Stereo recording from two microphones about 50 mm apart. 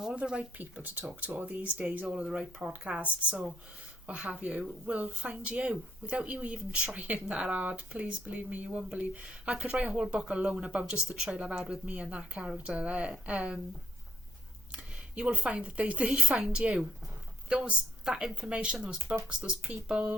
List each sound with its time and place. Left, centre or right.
0.2 s speech: right
0.6 s speech: right
2.1 s speech: centre
2.4 s speech: centre
2.8 s speech: right
14.7 s speech: right